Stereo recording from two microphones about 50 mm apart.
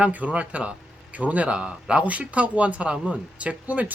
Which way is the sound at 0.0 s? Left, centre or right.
Right.